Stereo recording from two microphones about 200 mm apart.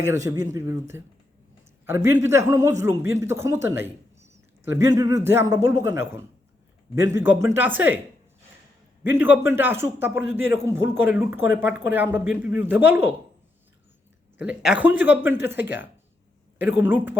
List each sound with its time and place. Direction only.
0.0 s a man's voice: 15° right (ahead or behind)
9.0 s a man's voice: 10° right (ahead or behind)
14.3 s a man's voice: 5° right (ahead or behind)